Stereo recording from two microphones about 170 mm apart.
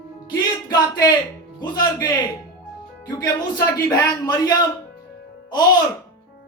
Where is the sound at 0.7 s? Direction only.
20° left (ahead or behind).